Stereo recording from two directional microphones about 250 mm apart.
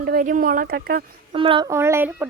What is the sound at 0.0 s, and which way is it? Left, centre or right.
Speech, right.